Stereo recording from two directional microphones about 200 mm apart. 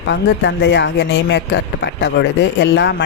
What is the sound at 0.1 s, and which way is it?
Speech, 60° left (ahead or behind).